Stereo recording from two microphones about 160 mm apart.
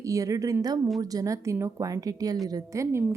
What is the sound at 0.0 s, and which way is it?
A woman's voice, 20° right (ahead or behind).